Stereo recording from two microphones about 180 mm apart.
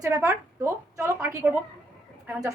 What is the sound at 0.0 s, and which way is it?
A woman's voice, 15° right (ahead or behind).